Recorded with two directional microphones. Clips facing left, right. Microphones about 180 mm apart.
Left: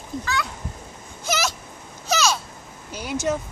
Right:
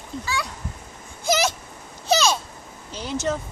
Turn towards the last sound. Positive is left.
turn(degrees=10)  # may be behind; listen again after turning